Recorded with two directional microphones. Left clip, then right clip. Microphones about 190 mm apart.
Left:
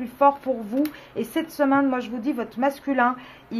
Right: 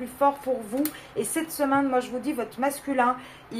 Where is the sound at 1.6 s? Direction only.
40° left (ahead or behind).